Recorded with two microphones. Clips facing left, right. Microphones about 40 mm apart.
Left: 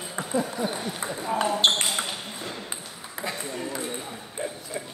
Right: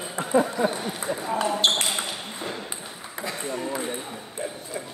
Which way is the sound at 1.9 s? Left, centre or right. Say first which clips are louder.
Even; centre.